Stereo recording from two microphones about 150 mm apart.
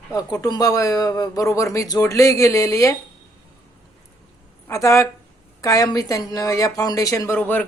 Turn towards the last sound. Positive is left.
turn(degrees=10)  # may be behind; listen again after turning